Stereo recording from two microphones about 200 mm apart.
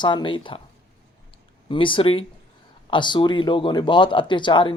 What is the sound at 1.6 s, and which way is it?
Speech, 25° left (ahead or behind).